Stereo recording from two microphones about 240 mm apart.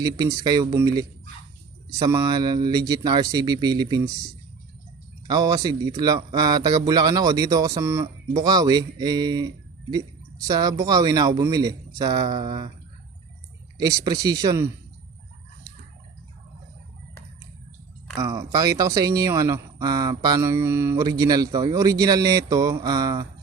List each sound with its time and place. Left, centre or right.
0.0 s speech: centre
5.3 s speech: centre
13.7 s speech: centre
18.2 s speech: centre